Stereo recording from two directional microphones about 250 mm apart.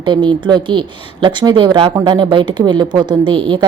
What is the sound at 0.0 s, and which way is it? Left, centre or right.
A woman's voice, centre.